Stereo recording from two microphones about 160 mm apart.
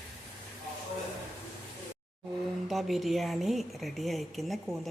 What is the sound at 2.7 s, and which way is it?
Speech, centre (ahead or behind).